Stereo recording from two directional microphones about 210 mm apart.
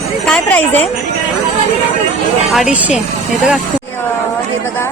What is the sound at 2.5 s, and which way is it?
Speech, 5° right (ahead or behind).